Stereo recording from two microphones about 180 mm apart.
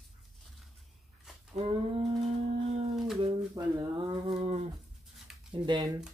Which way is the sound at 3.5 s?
20° right (ahead or behind).